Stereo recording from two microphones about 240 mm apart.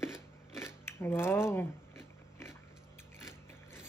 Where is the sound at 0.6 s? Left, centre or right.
Centre.